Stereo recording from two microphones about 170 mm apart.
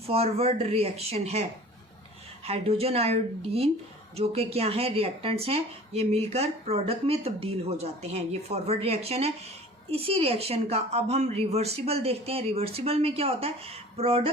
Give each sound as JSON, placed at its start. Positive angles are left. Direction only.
{"t": 0.1, "sound": "speech", "side_deg": -35}